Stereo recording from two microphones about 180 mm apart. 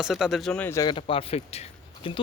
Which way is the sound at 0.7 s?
20° left (ahead or behind).